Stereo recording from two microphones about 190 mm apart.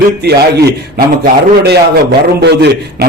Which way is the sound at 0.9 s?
55° right (ahead or behind).